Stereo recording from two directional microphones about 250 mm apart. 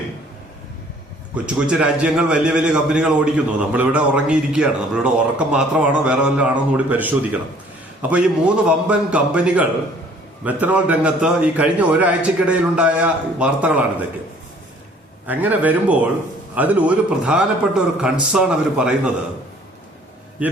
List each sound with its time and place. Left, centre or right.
1.5 s a man's voice: centre
8.1 s a man's voice: centre
15.3 s a man's voice: centre